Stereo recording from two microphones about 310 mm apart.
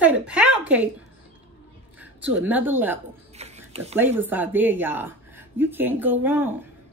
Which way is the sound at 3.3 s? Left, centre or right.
Right.